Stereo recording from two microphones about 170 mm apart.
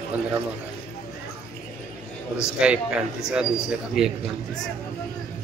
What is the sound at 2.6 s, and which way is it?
A man's voice, 5° right (ahead or behind).